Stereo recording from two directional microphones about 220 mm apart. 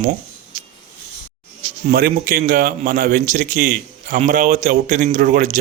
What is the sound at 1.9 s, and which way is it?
A man's voice, 40° right (ahead or behind).